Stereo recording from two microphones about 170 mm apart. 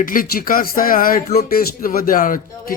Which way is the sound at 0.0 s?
55° left (ahead or behind).